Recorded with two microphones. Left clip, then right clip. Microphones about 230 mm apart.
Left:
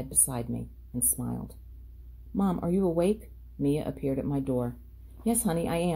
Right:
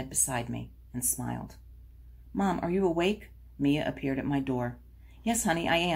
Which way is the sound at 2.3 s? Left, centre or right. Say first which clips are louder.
Even; left.